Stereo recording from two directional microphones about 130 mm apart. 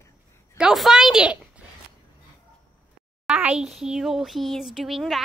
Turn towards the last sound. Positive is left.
turn(degrees=0)  # may be behind; listen again after turning